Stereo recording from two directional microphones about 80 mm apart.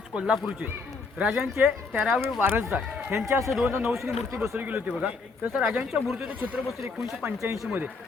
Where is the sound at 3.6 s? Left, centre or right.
Centre.